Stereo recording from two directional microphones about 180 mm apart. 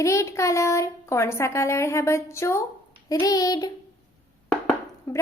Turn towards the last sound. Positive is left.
turn(degrees=10)  # may be behind; listen again after turning